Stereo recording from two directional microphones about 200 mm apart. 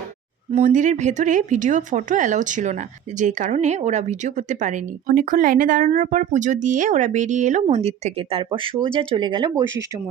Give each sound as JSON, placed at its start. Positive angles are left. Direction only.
{"t": 0.5, "sound": "speech", "side_deg": -40}